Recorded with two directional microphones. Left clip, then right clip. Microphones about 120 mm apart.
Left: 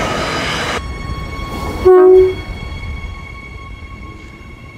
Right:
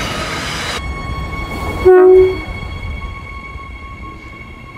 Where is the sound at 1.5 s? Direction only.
45° left (ahead or behind).